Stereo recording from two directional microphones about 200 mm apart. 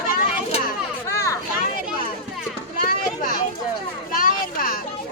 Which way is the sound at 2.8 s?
40° left (ahead or behind).